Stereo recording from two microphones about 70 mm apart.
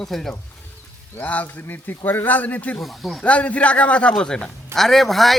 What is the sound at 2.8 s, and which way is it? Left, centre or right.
Speech, centre.